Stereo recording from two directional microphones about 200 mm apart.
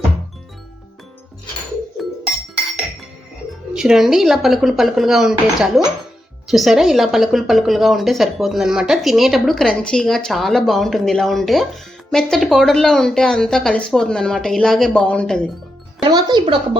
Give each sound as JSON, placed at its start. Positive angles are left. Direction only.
{"t": 3.7, "sound": "a woman's voice", "side_deg": -5}
{"t": 16.0, "sound": "speech", "side_deg": -20}